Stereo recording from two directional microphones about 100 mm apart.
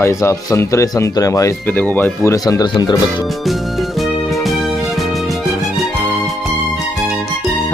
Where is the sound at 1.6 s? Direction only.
20° left (ahead or behind); by 2.7 s 40° left (ahead or behind).